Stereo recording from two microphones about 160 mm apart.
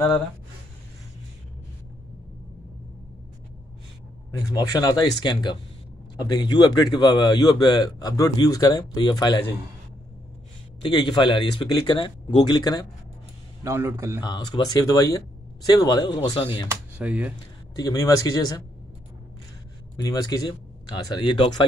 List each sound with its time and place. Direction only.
4.5 s a man's voice: 25° left (ahead or behind)
10.8 s a man's voice: 25° left (ahead or behind)
13.7 s a man's voice: 15° right (ahead or behind)
14.2 s a man's voice: 25° left (ahead or behind)
17.0 s a man's voice: 10° right (ahead or behind)
17.7 s a man's voice: 20° left (ahead or behind)
20.0 s a man's voice: 25° left (ahead or behind)